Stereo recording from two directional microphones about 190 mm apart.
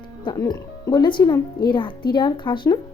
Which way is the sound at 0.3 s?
20° left (ahead or behind).